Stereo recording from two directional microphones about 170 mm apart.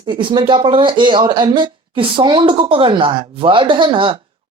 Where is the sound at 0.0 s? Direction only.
30° right (ahead or behind).